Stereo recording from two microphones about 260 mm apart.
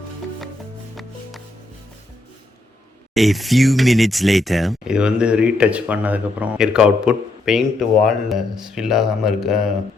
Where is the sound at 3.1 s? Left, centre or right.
Centre.